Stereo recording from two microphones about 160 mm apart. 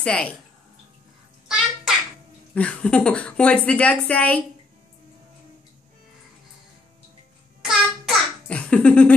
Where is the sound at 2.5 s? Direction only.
5° left (ahead or behind).